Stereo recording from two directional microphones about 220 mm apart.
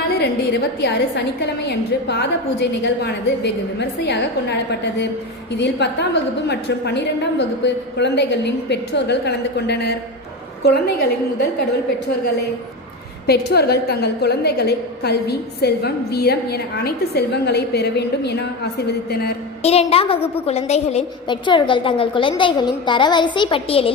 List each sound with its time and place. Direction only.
0.2 s a woman's voice: 50° left (ahead or behind)
13.2 s a woman's voice: 45° left (ahead or behind)
19.6 s a woman's voice: 25° left (ahead or behind)